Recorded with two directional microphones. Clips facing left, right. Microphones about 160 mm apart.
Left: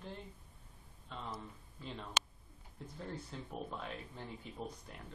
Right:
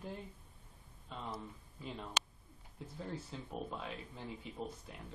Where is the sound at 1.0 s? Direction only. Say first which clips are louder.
Right 1 dB; 5° right (ahead or behind).